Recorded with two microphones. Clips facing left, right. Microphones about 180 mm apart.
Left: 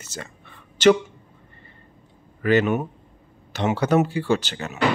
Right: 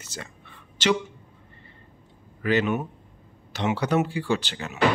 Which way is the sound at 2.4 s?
50° left (ahead or behind).